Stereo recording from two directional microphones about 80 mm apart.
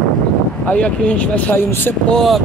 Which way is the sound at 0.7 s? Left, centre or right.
Centre.